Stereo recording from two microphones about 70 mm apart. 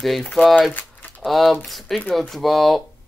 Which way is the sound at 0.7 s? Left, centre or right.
Left.